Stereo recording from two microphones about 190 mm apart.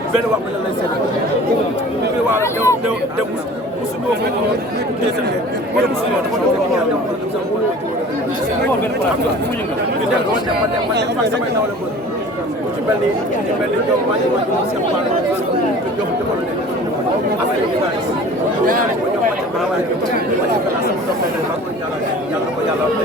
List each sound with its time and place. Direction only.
2.4 s speech: 15° left (ahead or behind)